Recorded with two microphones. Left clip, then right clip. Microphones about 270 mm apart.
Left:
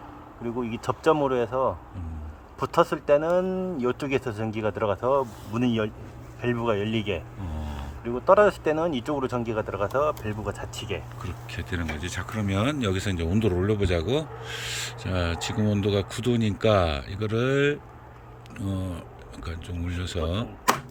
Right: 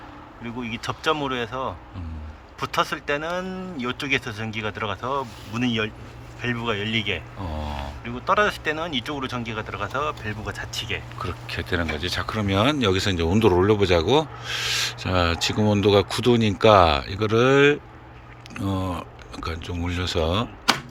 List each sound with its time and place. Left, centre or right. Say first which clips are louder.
0.4 s speech: left 1 dB; left
7.4 s speech: right 7 dB; centre
8.0 s speech: left 3 dB; left
11.2 s speech: right 7 dB; centre